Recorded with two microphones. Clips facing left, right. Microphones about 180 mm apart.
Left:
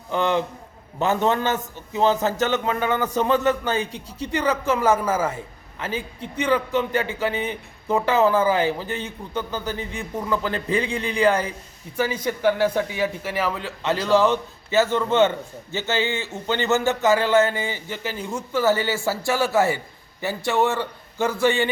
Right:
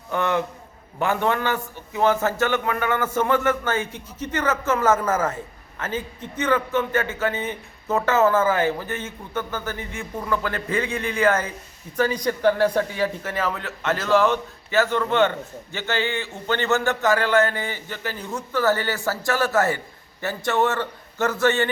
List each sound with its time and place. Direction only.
0.1 s a man's voice: 20° left (ahead or behind)